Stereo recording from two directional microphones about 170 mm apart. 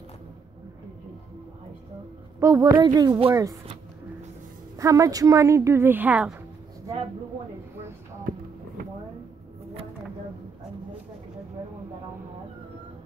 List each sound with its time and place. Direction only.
2.4 s speech: 20° right (ahead or behind)
4.7 s a woman's voice: 20° right (ahead or behind)
8.8 s a sound: 55° right (ahead or behind)